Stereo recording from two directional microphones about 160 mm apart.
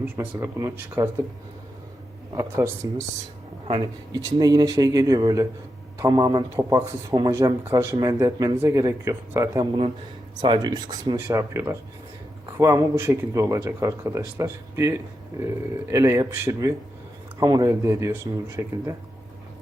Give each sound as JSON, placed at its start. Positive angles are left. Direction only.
{"t": 0.0, "sound": "speech", "side_deg": -15}
{"t": 2.3, "sound": "speech", "side_deg": -20}
{"t": 4.2, "sound": "speech", "side_deg": -20}